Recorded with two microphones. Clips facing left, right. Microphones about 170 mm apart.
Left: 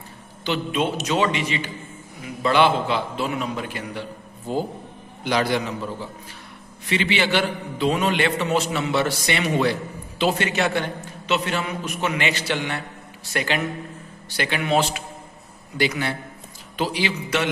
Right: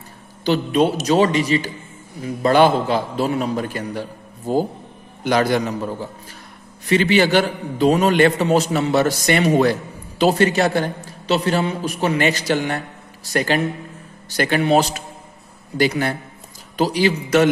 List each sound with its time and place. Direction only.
0.4 s a man's voice: 40° right (ahead or behind)
6.9 s a man's voice: 45° right (ahead or behind)